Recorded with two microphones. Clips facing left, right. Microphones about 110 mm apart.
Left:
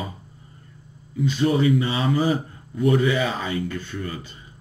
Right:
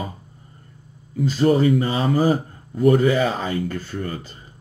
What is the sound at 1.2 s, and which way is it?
Speech, 40° right (ahead or behind).